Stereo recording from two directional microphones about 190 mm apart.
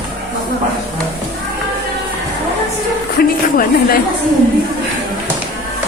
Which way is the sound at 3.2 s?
50° left (ahead or behind).